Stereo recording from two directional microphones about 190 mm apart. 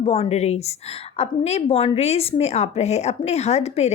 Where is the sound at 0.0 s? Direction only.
35° left (ahead or behind).